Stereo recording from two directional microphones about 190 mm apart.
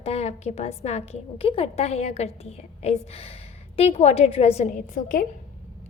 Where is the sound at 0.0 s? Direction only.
30° left (ahead or behind).